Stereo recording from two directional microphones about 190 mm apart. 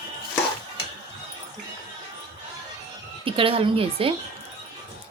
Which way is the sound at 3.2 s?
30° right (ahead or behind).